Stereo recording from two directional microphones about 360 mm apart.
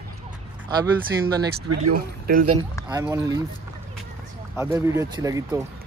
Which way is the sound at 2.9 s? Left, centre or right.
Centre.